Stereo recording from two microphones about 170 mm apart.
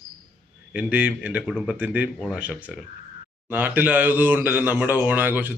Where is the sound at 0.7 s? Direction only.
10° right (ahead or behind).